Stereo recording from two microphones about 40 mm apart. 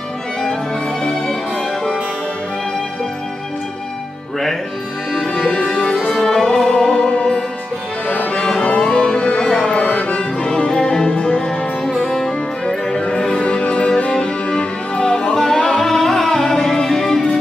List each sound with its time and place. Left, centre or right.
1.0 s music: centre
5.5 s music: left
6.2 s music: centre
9.8 s music: left
11.8 s music: centre
13.4 s music: left; by 17.4 s centre